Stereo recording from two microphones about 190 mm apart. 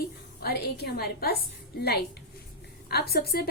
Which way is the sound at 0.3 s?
55° left (ahead or behind).